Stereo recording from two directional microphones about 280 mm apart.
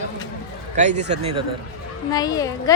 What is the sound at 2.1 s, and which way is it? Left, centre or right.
Speech, centre.